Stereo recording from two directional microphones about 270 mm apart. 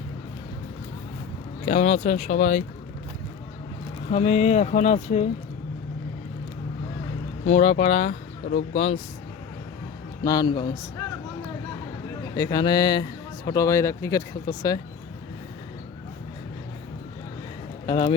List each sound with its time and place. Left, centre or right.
1.6 s speech: left
4.1 s speech: left
7.4 s speech: left
10.2 s speech: centre
12.4 s speech: centre
17.8 s speech: centre